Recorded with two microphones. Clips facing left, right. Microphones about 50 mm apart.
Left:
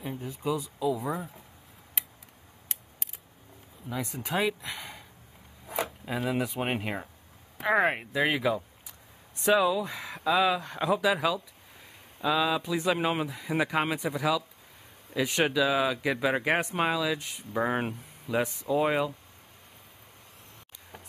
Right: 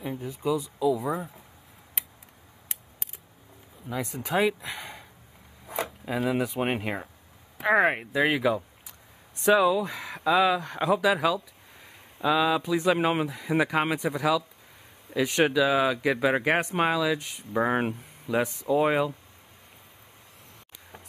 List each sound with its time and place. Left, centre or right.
0.7 s speech: centre
1.0 s speech: centre
3.9 s speech: centre
4.6 s speech: right
5.7 s speech: centre
13.0 s speech: centre
17.6 s speech: centre
18.2 s speech: centre